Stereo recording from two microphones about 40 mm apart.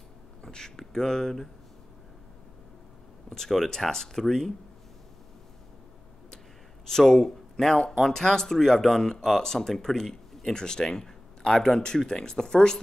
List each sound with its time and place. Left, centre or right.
0.4 s speech: centre
3.3 s speech: centre
6.9 s speech: centre